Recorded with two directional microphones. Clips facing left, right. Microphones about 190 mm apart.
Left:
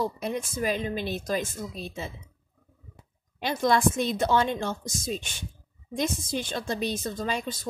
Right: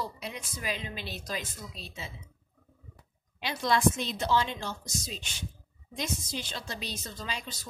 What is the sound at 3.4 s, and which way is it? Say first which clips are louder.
A woman's voice: left 4 dB; 50° left (ahead or behind).